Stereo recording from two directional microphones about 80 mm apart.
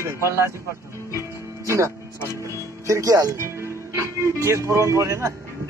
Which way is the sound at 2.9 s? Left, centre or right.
Right.